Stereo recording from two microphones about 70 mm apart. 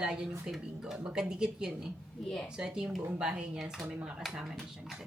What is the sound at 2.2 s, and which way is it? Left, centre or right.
Speech, centre.